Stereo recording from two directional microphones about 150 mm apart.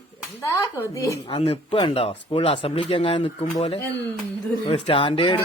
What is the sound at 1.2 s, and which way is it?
Speech, 40° left (ahead or behind).